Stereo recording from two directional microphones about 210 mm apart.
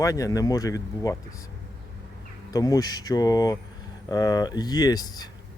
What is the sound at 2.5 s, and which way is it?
Speech, 15° left (ahead or behind).